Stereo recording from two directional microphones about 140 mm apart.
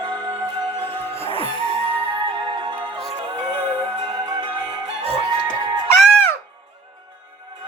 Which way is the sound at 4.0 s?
35° right (ahead or behind).